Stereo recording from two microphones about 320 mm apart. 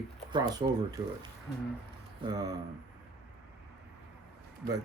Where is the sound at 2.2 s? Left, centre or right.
Centre.